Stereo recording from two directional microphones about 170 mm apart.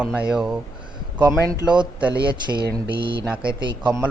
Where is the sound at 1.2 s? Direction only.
20° right (ahead or behind).